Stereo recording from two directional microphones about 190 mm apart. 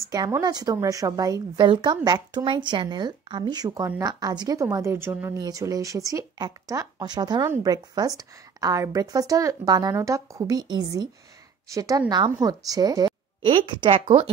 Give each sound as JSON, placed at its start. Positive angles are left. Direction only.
{"t": 0.1, "sound": "speech", "side_deg": -20}